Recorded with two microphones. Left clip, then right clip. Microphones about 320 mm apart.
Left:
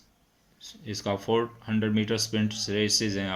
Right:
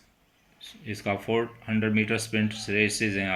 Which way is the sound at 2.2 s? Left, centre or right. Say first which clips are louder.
Right 1 dB; left.